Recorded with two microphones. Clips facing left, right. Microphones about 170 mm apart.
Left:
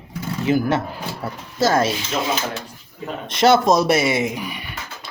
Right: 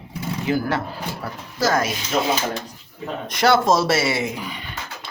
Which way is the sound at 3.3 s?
25° left (ahead or behind).